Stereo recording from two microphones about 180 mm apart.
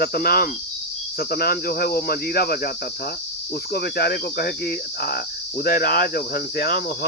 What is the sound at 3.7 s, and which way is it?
Cricket, 60° left (ahead or behind).